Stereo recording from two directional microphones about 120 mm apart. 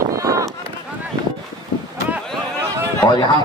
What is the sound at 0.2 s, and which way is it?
Run, 30° right (ahead or behind).